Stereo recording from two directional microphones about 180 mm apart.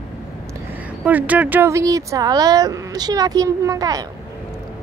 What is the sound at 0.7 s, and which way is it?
Speech, 10° right (ahead or behind).